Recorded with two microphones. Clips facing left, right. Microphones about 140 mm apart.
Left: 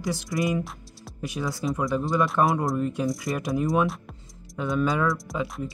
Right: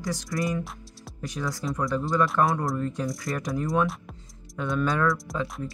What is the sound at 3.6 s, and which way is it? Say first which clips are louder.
Speech: left 2 dB; 20° left (ahead or behind).